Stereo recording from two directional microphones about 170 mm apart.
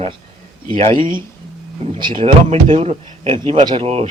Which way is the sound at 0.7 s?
30° right (ahead or behind).